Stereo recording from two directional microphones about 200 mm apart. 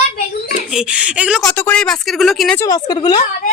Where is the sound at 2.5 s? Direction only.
20° left (ahead or behind).